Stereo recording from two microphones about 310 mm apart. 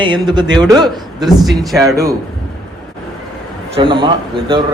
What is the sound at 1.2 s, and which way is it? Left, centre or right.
Speech, centre.